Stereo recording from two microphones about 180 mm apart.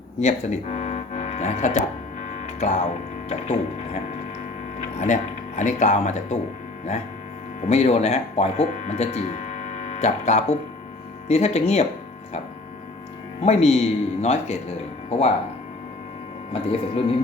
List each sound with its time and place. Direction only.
0.2 s speech: 40° left (ahead or behind)
2.2 s music: 40° left (ahead or behind)
3.2 s speech: 35° left (ahead or behind)
4.8 s speech: 40° left (ahead or behind)
7.6 s speech: 35° left (ahead or behind)
13.4 s speech: 35° left (ahead or behind)
16.5 s speech: 30° left (ahead or behind)